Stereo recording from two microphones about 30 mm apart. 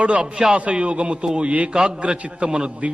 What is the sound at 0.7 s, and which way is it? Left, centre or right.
Music, right.